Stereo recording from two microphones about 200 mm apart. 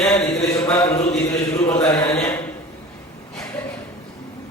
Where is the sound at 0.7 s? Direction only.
15° left (ahead or behind).